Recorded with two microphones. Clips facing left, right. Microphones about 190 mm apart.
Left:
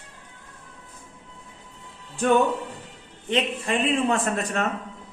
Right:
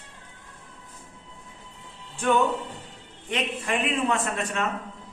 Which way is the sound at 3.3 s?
30° left (ahead or behind).